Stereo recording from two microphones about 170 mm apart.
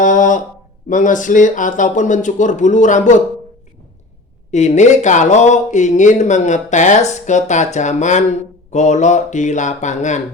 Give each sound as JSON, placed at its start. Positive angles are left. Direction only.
{"t": 0.0, "sound": "speech", "side_deg": 50}
{"t": 4.5, "sound": "speech", "side_deg": 45}